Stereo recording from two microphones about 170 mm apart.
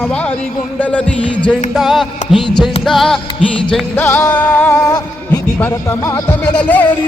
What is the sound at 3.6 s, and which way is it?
Speech, 10° left (ahead or behind).